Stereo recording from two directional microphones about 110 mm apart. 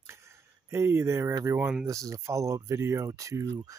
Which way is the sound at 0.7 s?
25° right (ahead or behind).